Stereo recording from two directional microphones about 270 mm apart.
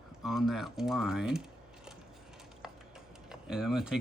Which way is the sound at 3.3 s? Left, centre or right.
Centre.